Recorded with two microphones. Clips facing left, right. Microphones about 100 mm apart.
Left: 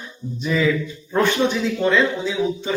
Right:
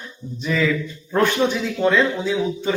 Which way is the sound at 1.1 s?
5° right (ahead or behind).